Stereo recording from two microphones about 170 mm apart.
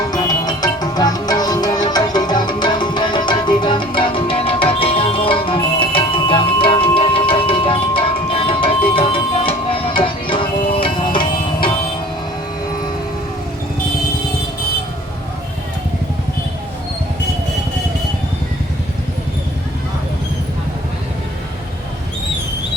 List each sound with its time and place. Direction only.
0.1 s music: 25° left (ahead or behind)